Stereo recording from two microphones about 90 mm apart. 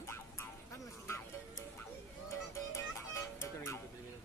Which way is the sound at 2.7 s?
30° left (ahead or behind).